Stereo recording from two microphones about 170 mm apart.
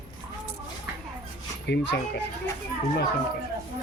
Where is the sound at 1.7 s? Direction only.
80° left.